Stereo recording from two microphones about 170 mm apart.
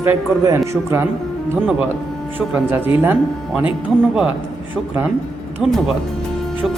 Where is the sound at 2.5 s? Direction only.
10° right (ahead or behind).